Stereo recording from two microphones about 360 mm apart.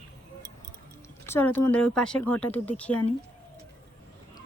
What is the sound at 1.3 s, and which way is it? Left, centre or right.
Speech, centre.